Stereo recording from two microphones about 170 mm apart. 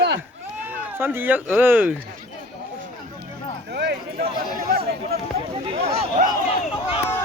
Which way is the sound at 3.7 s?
75° right (ahead or behind).